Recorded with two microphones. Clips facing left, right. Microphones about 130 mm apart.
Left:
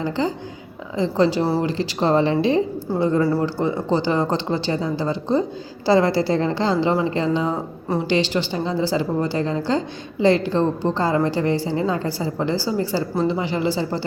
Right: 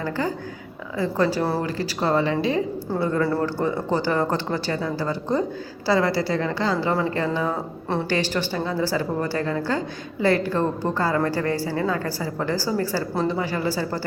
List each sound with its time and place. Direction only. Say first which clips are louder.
0.0 s a woman's voice: left 3 dB; 20° left (ahead or behind)